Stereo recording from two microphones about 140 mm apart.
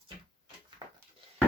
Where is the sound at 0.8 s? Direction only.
30° right (ahead or behind).